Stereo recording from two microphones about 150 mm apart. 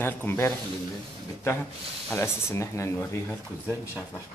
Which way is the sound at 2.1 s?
15° left (ahead or behind).